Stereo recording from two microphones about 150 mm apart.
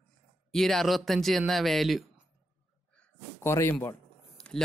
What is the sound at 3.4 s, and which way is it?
Speech, 15° left (ahead or behind).